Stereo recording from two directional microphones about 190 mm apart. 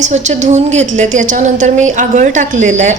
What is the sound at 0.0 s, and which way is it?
A woman's voice, 40° right (ahead or behind).